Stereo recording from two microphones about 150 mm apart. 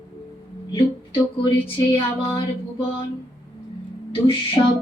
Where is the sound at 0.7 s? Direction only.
35° left (ahead or behind).